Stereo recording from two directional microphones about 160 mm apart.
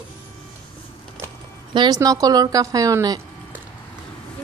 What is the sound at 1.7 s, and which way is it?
A woman's voice, 25° right (ahead or behind).